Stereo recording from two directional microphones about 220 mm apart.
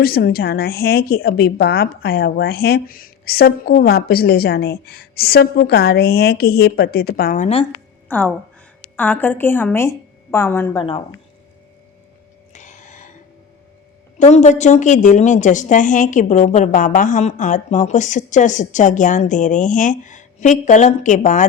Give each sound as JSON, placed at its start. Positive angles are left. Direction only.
{"t": 0.0, "sound": "speech", "side_deg": 45}
{"t": 8.0, "sound": "a sound", "side_deg": 5}
{"t": 9.0, "sound": "a woman's voice", "side_deg": 10}
{"t": 10.8, "sound": "speech", "side_deg": 25}
{"t": 12.5, "sound": "a sound", "side_deg": 35}
{"t": 14.2, "sound": "a woman's voice", "side_deg": 30}